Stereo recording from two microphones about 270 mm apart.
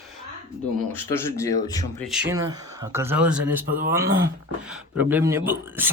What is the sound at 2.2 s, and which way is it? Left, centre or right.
Speech, centre.